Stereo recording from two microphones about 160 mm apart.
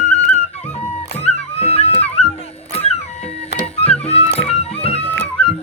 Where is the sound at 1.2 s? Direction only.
40° left (ahead or behind).